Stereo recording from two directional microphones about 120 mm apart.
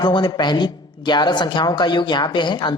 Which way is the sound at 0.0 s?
40° left (ahead or behind).